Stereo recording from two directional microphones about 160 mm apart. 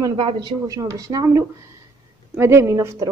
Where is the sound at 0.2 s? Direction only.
30° right (ahead or behind).